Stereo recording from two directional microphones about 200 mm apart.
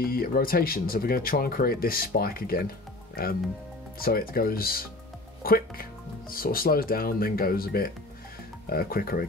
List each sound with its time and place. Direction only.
0.0 s speech: 50° left (ahead or behind)